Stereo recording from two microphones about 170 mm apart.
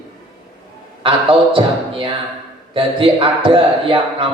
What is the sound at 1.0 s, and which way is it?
A man's voice, 30° right (ahead or behind).